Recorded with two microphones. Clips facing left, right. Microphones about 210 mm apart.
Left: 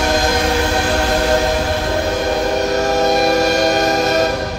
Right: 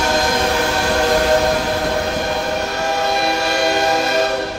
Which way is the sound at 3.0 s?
40° left (ahead or behind).